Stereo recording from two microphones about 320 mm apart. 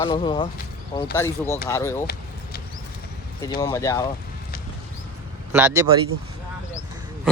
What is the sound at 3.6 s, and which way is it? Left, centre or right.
Speech, centre.